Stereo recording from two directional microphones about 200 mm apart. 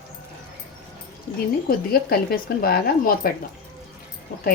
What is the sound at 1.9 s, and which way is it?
Speech, 50° left (ahead or behind).